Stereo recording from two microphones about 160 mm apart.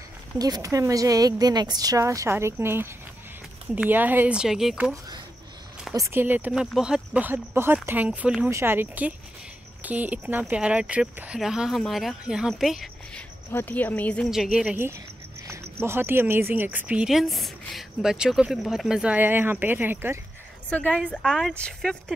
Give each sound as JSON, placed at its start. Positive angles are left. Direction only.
{"t": 0.4, "sound": "a woman's voice", "side_deg": -20}
{"t": 5.9, "sound": "speech", "side_deg": -15}
{"t": 13.5, "sound": "speech", "side_deg": 10}
{"t": 15.4, "sound": "speech", "side_deg": -15}
{"t": 21.1, "sound": "speech", "side_deg": 0}